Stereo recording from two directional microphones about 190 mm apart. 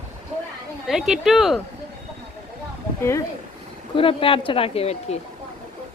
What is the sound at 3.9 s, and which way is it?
Speech, 30° left (ahead or behind).